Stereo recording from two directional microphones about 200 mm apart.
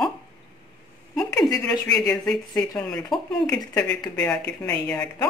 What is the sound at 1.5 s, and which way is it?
Speech, 5° left (ahead or behind).